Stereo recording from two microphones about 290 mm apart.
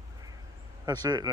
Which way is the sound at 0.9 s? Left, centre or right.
Centre.